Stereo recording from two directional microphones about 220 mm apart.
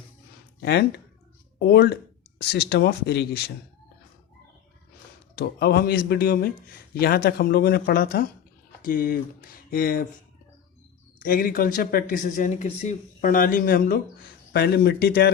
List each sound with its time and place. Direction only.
0.6 s speech: 45° left (ahead or behind)
5.4 s speech: 45° left (ahead or behind)
11.2 s speech: 40° left (ahead or behind)